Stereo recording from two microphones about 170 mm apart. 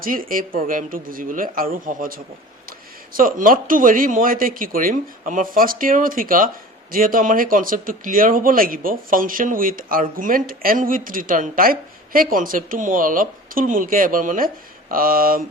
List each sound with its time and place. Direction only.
0.0 s speech: 55° right (ahead or behind)